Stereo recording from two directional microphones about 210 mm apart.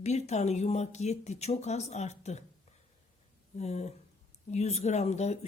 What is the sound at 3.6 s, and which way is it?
Speech, 30° left (ahead or behind).